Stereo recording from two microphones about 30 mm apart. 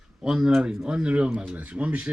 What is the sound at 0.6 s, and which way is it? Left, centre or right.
Speech, right.